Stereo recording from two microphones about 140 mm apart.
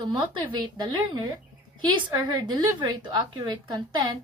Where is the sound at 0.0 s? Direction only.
35° right (ahead or behind).